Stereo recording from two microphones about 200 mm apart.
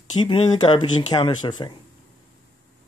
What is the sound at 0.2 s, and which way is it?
Speech, 25° left (ahead or behind).